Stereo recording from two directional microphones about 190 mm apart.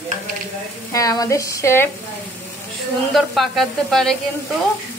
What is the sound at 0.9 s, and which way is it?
Speech, 20° left (ahead or behind).